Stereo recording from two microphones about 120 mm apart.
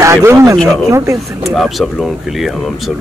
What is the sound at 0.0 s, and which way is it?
Speech, 25° right (ahead or behind).